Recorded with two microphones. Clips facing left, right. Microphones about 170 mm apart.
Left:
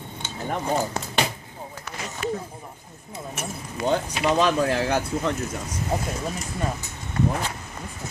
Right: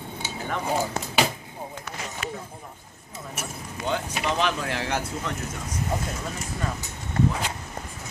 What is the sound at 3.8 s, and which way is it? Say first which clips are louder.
Speech: left 5 dB; 45° left (ahead or behind).